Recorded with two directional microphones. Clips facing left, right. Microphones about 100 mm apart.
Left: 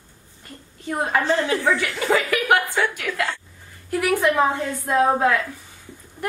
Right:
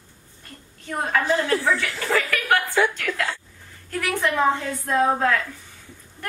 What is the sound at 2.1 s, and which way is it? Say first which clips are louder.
Speech: left 3 dB; 20° left (ahead or behind).